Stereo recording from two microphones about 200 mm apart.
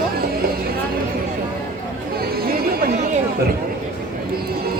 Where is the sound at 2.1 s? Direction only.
50° right (ahead or behind).